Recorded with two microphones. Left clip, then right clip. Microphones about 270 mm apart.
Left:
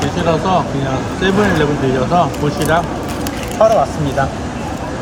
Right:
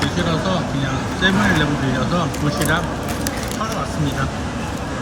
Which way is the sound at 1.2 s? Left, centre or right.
Centre.